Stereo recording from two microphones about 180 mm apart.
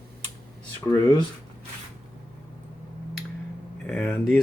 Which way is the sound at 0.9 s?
15° left (ahead or behind).